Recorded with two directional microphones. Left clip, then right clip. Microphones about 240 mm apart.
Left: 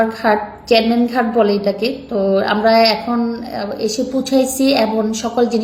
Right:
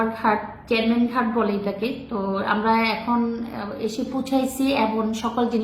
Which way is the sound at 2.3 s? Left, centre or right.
Centre.